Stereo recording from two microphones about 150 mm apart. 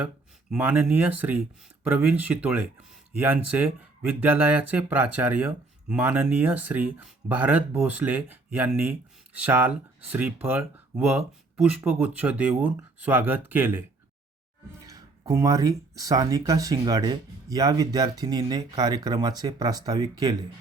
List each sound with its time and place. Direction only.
0.5 s speech: 10° right (ahead or behind)
14.8 s speech: 25° right (ahead or behind)